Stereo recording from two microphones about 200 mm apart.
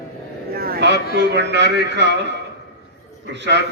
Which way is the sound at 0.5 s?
50° right (ahead or behind).